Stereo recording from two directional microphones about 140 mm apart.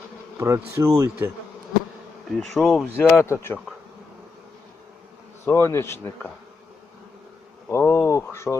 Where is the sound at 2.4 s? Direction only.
Centre (ahead or behind).